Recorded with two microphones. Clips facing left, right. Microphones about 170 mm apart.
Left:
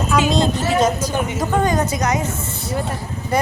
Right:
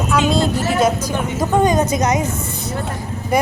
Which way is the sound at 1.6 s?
20° right (ahead or behind).